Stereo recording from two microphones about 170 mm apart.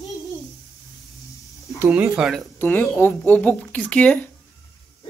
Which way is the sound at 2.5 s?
10° left (ahead or behind).